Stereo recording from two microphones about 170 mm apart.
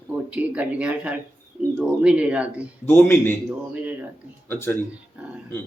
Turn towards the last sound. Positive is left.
turn(degrees=15)  # may be behind; listen again after turning